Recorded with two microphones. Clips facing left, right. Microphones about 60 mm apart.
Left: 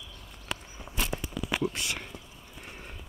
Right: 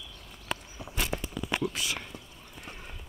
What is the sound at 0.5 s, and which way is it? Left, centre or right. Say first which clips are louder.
Walk: right 1 dB; centre.